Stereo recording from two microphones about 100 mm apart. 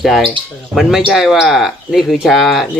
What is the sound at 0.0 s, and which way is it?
Speech, centre (ahead or behind).